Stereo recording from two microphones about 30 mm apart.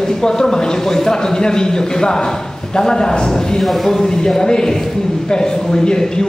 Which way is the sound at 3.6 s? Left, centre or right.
Centre.